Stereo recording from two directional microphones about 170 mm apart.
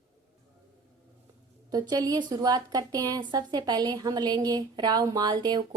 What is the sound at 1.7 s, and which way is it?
A woman's voice, 20° right (ahead or behind).